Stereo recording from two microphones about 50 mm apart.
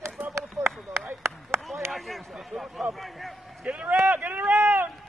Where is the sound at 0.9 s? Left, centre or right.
Right.